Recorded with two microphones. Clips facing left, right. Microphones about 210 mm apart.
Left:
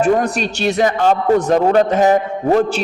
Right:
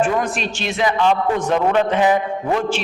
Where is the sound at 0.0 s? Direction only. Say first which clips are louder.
Left 4 dB; 40° left (ahead or behind).